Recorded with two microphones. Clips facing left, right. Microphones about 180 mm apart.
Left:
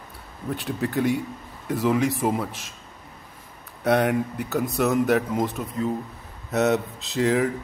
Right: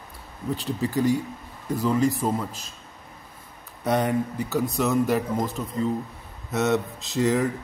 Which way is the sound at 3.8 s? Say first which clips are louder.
Left 2 dB; 75° left (ahead or behind).